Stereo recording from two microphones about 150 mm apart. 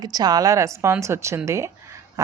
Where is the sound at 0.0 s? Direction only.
25° right (ahead or behind).